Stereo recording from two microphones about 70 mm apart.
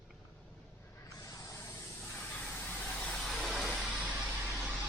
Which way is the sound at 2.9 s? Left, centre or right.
Centre.